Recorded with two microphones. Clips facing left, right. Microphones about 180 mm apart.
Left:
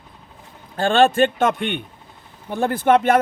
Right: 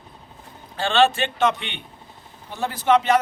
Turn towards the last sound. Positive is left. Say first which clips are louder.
# left 3 dB
turn(degrees=55)  # may be behind; listen again after turning